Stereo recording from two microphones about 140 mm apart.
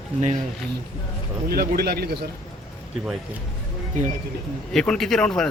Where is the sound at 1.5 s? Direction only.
90° right.